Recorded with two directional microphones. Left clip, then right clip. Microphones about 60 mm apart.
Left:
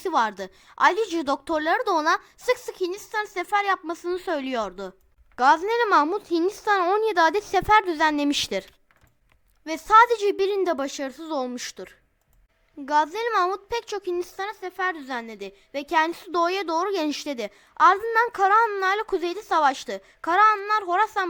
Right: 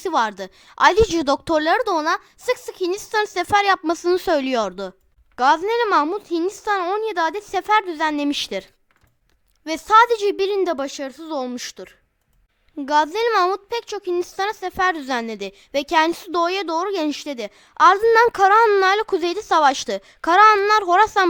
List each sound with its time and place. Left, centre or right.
0.0 s a woman's voice: centre
0.9 s a woman's voice: right
3.1 s a woman's voice: right
4.1 s a woman's voice: right
4.6 s a woman's voice: centre
9.6 s a woman's voice: centre
14.5 s a woman's voice: right
15.1 s a woman's voice: right
16.0 s a woman's voice: centre
17.7 s a woman's voice: centre
18.8 s a woman's voice: centre
19.0 s a woman's voice: right
20.5 s a child's voice: right